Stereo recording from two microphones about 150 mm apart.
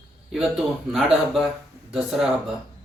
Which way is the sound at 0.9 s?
Centre (ahead or behind).